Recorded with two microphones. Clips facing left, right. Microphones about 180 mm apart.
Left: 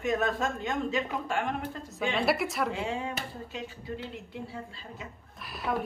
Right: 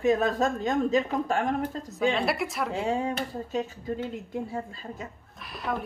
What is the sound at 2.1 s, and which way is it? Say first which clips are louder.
Speech: even; centre (ahead or behind).